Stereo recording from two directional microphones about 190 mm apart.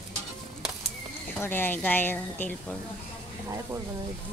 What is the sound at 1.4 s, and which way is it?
Speech, 10° left (ahead or behind).